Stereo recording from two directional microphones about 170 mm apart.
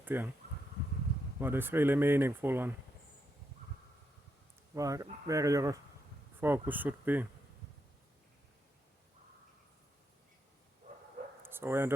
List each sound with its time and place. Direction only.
0.0 s speech: 10° right (ahead or behind)
1.4 s speech: 10° right (ahead or behind)
4.7 s speech: 20° right (ahead or behind)
10.8 s bow-wow: 45° right (ahead or behind)
11.4 s speech: 15° right (ahead or behind)